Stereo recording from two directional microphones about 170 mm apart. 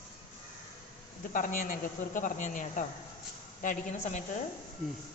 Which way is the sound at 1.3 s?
50° left (ahead or behind).